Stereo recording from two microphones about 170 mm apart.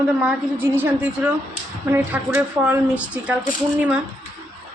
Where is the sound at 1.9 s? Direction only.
10° right (ahead or behind).